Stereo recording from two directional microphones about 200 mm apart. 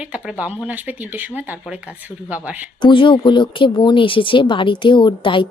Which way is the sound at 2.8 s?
25° left (ahead or behind).